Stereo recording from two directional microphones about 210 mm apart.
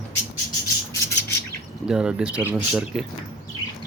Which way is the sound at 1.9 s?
5° right (ahead or behind).